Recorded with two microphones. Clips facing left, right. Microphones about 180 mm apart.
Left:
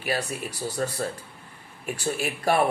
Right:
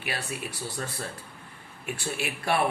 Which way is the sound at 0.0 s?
40° left (ahead or behind).